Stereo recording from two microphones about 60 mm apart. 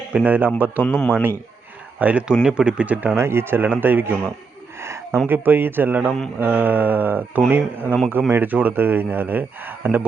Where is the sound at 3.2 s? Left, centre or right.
Right.